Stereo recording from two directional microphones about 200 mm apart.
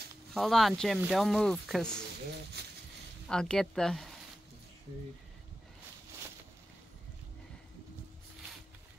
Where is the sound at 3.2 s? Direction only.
5° left (ahead or behind).